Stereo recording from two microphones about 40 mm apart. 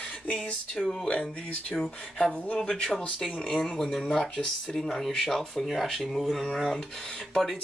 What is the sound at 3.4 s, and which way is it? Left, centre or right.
Speech, centre.